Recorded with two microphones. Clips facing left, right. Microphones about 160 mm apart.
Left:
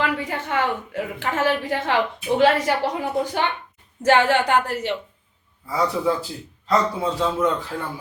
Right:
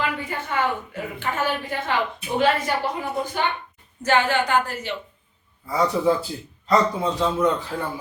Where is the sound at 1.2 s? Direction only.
90° left.